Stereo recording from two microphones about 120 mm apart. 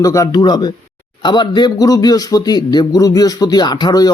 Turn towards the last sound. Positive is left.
turn(degrees=35)  # may be behind; listen again after turning